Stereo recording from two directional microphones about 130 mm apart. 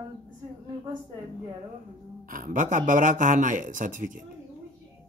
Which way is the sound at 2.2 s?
90° right.